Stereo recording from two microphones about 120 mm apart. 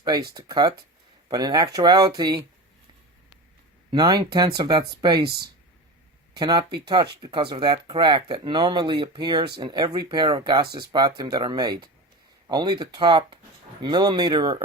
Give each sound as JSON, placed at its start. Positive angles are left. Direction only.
{"t": 0.0, "sound": "speech", "side_deg": -35}
{"t": 3.9, "sound": "speech", "side_deg": -35}